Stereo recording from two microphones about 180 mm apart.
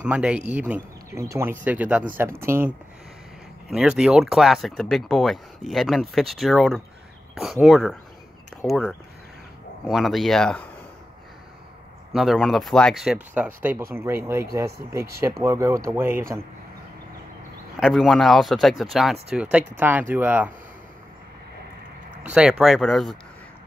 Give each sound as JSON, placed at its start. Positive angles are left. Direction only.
{"t": 0.0, "sound": "speech", "side_deg": -5}
{"t": 3.7, "sound": "speech", "side_deg": -5}
{"t": 12.1, "sound": "speech", "side_deg": 0}
{"t": 17.7, "sound": "speech", "side_deg": 0}
{"t": 22.2, "sound": "speech", "side_deg": -5}